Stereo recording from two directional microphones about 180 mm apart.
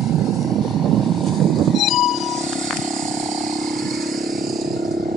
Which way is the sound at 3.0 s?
45° right (ahead or behind).